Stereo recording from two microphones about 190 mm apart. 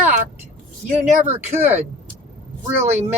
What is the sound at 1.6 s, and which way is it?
Speech, 10° right (ahead or behind).